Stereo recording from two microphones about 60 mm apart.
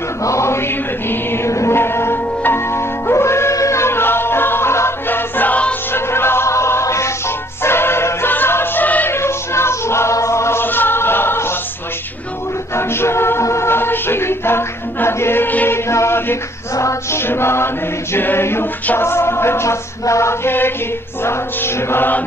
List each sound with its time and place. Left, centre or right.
0.2 s mantra: left
1.5 s music: left
1.8 s music: left
9.1 s music: left
10.1 s chant: left
10.6 s music: left
12.7 s music: left
15.9 s chant: left
17.1 s mantra: left
18.1 s choir: left
18.9 s music: left